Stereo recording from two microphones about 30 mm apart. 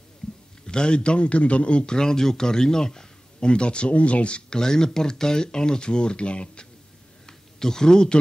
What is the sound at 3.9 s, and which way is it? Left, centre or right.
Speech, left.